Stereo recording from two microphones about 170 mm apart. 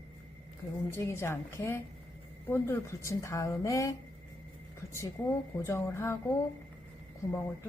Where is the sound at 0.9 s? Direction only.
15° left (ahead or behind).